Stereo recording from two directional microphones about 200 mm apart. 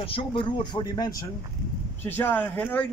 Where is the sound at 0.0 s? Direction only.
25° left (ahead or behind).